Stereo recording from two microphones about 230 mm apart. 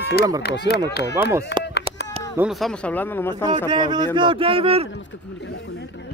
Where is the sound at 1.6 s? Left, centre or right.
Left.